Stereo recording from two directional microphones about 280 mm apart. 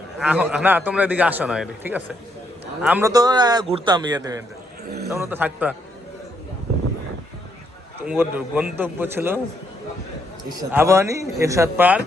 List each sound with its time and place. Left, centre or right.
0.2 s a man's voice: centre
8.0 s a man's voice: centre
10.7 s a man's voice: centre